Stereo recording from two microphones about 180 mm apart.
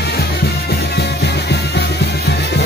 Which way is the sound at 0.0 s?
60° left (ahead or behind).